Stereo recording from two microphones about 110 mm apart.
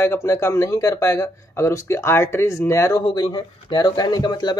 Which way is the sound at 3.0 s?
40° left (ahead or behind).